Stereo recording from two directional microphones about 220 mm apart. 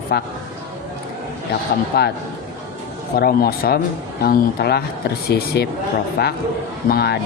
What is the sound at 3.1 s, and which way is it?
Speech, 45° left (ahead or behind).